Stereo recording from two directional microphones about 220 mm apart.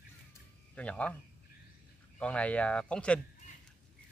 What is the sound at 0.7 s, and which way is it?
Speech, 5° left (ahead or behind).